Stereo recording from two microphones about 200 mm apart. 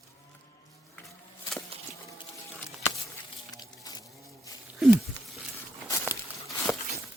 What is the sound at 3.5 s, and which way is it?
Music, 20° left (ahead or behind).